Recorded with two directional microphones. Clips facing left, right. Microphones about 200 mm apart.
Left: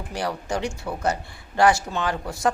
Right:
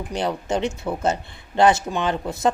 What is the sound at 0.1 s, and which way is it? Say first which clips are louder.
Speech: right 3 dB; 20° right (ahead or behind).